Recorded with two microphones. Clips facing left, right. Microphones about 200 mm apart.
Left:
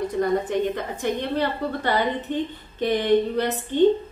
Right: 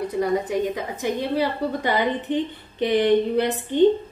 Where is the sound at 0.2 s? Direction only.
5° right (ahead or behind).